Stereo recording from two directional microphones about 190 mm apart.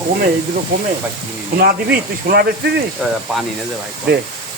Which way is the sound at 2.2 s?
50° right (ahead or behind).